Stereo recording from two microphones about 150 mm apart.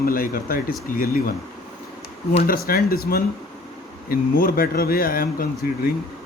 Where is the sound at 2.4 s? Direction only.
80° left.